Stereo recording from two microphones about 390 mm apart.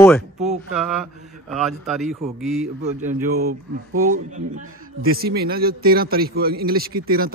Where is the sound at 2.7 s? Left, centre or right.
Centre.